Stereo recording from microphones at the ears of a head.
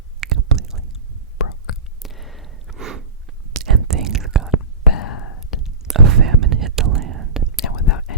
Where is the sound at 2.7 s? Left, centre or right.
Right.